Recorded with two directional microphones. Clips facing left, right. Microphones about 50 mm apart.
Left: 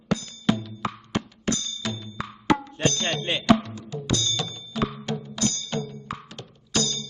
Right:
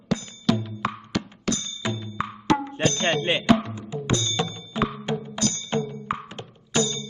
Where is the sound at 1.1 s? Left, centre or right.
Left.